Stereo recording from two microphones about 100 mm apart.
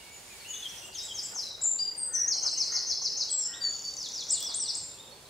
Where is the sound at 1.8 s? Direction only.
Centre (ahead or behind).